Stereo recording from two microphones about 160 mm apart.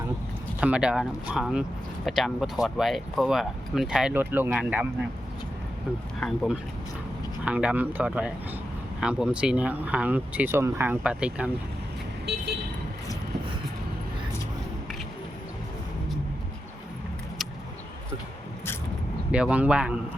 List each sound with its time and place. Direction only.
0.6 s speech: 5° right (ahead or behind)
6.1 s speech: 5° left (ahead or behind)
7.4 s speech: 10° right (ahead or behind)
12.3 s vehicle: 90° right
19.3 s speech: 10° right (ahead or behind)